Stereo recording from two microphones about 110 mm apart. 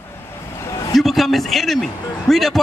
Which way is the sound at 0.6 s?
30° left (ahead or behind).